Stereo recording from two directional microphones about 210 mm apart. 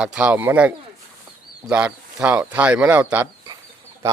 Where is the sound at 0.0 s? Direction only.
5° right (ahead or behind).